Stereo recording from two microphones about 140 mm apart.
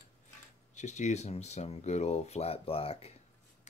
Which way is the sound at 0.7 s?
55° left (ahead or behind).